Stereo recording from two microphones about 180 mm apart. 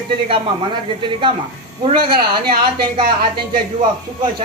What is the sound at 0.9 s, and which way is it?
A man's voice, 25° right (ahead or behind).